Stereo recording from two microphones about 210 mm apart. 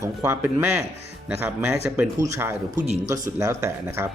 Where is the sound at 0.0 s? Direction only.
15° right (ahead or behind).